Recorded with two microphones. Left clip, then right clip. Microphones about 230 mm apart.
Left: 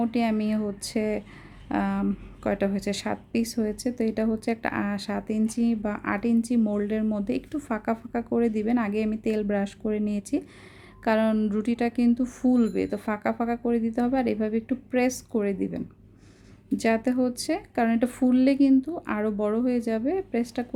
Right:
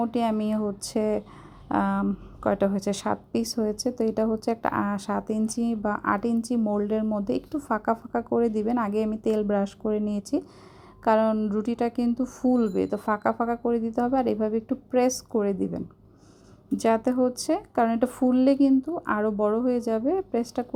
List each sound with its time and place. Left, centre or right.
0.0 s a woman's voice: centre